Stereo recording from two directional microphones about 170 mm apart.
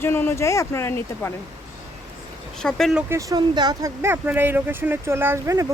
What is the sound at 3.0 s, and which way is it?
Speech, 20° right (ahead or behind).